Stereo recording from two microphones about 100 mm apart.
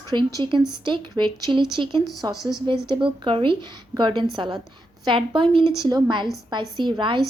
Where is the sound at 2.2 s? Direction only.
40° right (ahead or behind).